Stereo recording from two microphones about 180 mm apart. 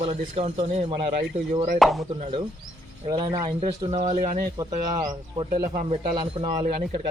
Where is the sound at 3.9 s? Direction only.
40° right (ahead or behind).